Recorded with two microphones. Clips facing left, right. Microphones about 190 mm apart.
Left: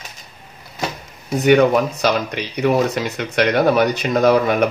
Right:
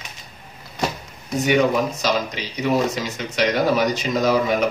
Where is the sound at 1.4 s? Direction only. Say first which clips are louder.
Left 5 dB; 60° left (ahead or behind).